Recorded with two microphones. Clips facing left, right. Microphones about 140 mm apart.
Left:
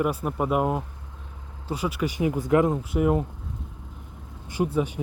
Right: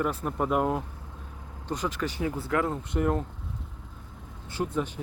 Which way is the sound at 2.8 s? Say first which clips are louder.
Left 4 dB; 5° left (ahead or behind).